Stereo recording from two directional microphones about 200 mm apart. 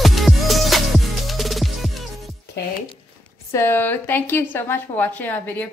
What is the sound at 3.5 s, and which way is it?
A woman's voice, 10° left (ahead or behind).